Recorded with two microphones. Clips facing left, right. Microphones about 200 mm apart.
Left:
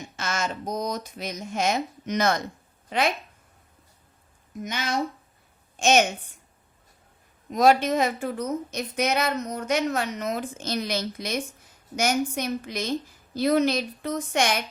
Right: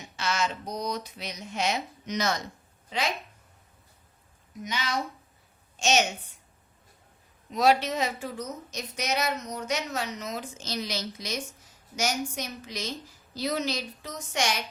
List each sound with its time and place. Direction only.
0.2 s speech: 50° left (ahead or behind)
4.6 s a woman's voice: 50° left (ahead or behind)
7.5 s a woman's voice: 50° left (ahead or behind)